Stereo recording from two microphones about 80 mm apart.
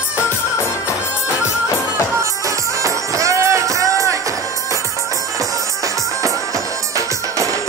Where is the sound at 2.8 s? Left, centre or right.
Right.